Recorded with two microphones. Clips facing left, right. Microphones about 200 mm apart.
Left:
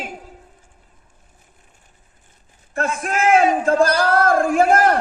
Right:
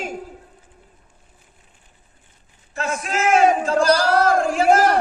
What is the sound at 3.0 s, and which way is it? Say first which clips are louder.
Speech: left 1 dB; 55° left (ahead or behind).